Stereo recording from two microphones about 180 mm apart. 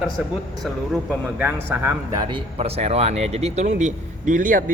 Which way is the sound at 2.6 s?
35° right (ahead or behind).